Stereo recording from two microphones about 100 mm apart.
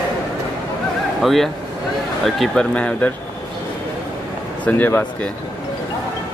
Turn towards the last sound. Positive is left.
turn(degrees=15)  # may be behind; listen again after turning